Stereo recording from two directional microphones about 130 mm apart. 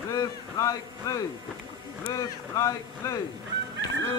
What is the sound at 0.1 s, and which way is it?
A man's voice, 25° left (ahead or behind).